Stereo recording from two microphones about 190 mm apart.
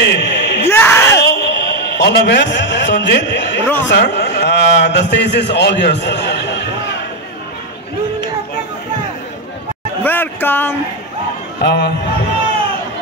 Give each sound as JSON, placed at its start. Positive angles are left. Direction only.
{"t": 0.0, "sound": "a sound", "side_deg": 60}
{"t": 0.7, "sound": "a sound", "side_deg": 10}
{"t": 1.3, "sound": "a man's voice", "side_deg": 65}
{"t": 3.6, "sound": "a man's voice", "side_deg": 10}
{"t": 3.9, "sound": "a man's voice", "side_deg": 60}
{"t": 10.0, "sound": "speech", "side_deg": 10}
{"t": 11.6, "sound": "speech", "side_deg": 60}